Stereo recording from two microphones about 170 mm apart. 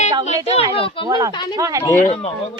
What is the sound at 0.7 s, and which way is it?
Speech, 35° left (ahead or behind).